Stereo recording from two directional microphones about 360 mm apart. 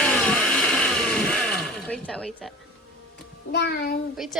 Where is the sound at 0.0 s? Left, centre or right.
Centre.